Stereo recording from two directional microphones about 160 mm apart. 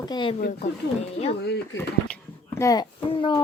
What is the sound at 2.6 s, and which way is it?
Speech, 25° left (ahead or behind).